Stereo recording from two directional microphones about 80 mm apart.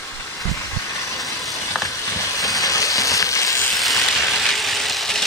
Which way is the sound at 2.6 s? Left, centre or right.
Left.